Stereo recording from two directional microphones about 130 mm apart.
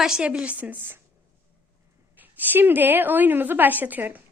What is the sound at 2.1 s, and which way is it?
A child's voice, 15° right (ahead or behind).